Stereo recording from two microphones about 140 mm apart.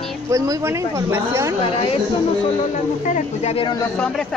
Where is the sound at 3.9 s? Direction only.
10° left (ahead or behind).